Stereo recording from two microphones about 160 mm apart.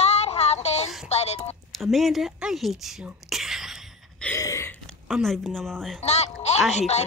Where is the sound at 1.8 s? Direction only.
Centre (ahead or behind).